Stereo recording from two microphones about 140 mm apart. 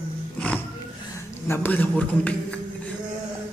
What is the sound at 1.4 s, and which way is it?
A man's voice, 15° left (ahead or behind).